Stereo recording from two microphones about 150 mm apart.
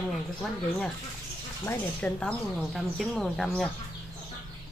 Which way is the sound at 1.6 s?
10° left (ahead or behind).